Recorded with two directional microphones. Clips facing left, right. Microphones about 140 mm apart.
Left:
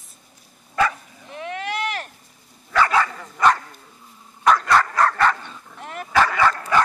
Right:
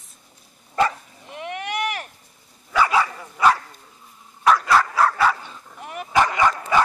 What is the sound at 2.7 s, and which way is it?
Dog, 10° right (ahead or behind).